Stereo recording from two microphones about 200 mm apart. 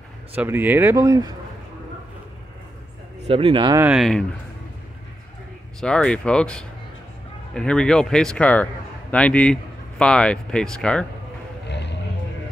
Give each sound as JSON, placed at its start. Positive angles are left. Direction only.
{"t": 0.4, "sound": "speech", "side_deg": -10}
{"t": 3.3, "sound": "speech", "side_deg": -30}
{"t": 3.9, "sound": "speech", "side_deg": 0}
{"t": 5.8, "sound": "speech", "side_deg": 5}
{"t": 11.6, "sound": "vehicle", "side_deg": 60}